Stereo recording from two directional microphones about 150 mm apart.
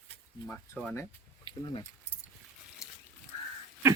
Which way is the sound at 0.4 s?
15° left (ahead or behind).